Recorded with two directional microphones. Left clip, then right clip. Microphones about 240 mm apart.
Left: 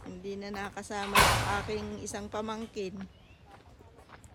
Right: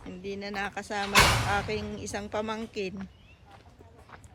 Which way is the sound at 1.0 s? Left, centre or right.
Left.